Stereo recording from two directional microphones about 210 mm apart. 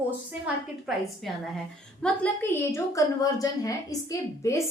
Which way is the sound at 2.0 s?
10° left (ahead or behind).